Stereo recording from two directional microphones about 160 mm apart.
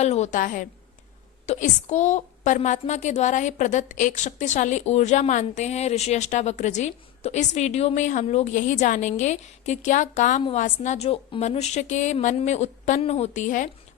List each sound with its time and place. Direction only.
0.0 s a woman's voice: 45° left (ahead or behind)